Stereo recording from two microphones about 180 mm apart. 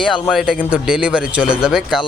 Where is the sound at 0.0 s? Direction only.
Centre (ahead or behind).